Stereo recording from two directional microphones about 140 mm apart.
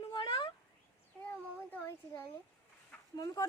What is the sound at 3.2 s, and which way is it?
Speech, 25° left (ahead or behind).